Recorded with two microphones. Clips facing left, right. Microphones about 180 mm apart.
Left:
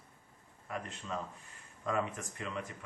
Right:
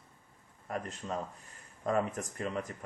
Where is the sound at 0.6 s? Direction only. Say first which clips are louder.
Right 4 dB; 40° right (ahead or behind).